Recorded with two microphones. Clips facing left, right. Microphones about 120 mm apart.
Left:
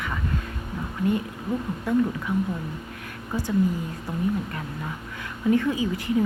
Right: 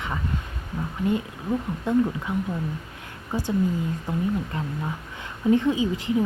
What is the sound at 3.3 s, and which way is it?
Speech, 25° right (ahead or behind).